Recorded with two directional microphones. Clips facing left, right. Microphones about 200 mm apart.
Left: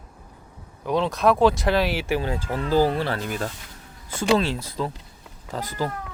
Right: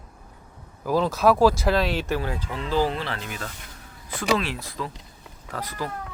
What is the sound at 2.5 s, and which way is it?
Speech, 40° left (ahead or behind).